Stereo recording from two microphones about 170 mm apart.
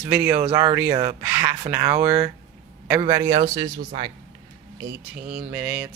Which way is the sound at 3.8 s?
35° right (ahead or behind).